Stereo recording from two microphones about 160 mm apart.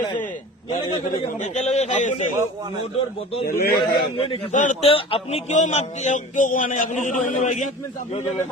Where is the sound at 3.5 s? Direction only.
70° left (ahead or behind).